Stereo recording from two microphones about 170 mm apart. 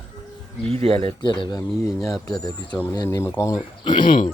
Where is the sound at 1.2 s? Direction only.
25° left (ahead or behind).